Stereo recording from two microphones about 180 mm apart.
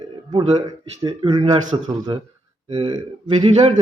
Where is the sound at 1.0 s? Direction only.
25° right (ahead or behind).